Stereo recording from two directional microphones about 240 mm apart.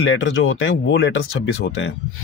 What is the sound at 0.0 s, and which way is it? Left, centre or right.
A man's voice, left.